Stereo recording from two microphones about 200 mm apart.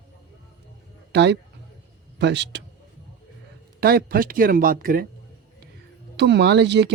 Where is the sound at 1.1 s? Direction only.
60° right (ahead or behind).